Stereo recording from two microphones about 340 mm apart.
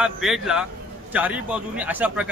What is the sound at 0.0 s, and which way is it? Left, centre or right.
A man's voice, centre.